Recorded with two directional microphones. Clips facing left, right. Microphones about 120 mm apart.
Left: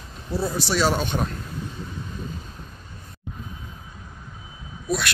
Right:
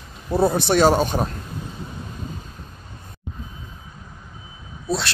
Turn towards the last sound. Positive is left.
turn(degrees=-30)  # may be behind; listen again after turning